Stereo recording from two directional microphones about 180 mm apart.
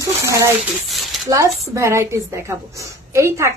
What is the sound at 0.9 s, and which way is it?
Dishes, centre (ahead or behind).